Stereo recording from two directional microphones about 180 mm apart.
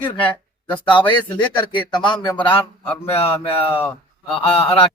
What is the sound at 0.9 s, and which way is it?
Speech, 25° left (ahead or behind).